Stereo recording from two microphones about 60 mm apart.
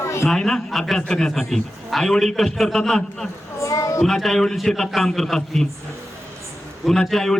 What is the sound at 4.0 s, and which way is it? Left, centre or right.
A man's voice, centre.